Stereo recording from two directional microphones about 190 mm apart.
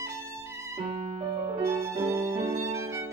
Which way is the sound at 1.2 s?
15° right (ahead or behind).